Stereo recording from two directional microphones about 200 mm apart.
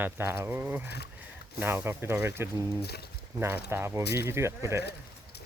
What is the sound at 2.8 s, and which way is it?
Speech, 55° left (ahead or behind).